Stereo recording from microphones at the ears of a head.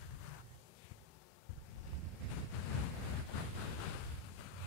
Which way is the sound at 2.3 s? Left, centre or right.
Left.